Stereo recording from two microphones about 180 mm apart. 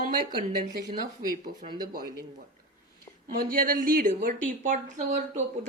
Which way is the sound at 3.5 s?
50° right (ahead or behind).